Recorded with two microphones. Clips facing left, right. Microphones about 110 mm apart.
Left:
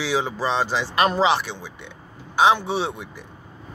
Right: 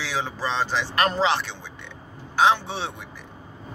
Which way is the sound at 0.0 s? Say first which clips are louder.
Left 5 dB; 15° left (ahead or behind).